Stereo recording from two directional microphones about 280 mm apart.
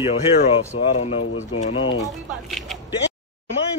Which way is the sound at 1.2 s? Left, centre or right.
Left.